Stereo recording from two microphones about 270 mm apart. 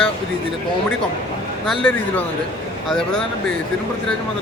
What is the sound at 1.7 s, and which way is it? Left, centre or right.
Speech, centre.